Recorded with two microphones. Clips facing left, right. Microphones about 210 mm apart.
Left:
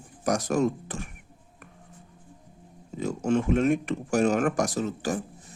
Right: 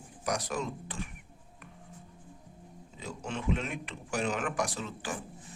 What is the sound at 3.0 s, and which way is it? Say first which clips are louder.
Speech: left 13 dB; 45° left (ahead or behind).